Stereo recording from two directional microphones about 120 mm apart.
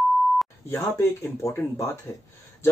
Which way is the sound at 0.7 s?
25° left (ahead or behind).